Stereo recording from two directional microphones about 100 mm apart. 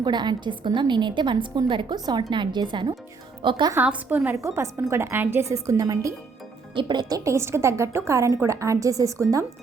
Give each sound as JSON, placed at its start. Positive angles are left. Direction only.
{"t": 0.0, "sound": "a woman's voice", "side_deg": -45}
{"t": 3.8, "sound": "a woman's voice", "side_deg": -15}
{"t": 4.4, "sound": "a woman's voice", "side_deg": -30}
{"t": 6.7, "sound": "a woman's voice", "side_deg": -50}
{"t": 7.3, "sound": "a woman's voice", "side_deg": -25}